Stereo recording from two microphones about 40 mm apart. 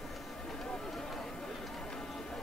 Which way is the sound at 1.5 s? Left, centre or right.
Centre.